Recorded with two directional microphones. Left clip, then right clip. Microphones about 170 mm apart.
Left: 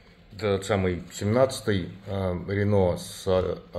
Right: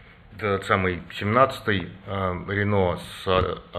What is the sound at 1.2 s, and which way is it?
Speech, 25° left (ahead or behind).